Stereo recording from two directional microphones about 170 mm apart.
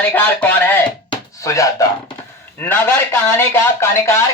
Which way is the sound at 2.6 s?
10° left (ahead or behind).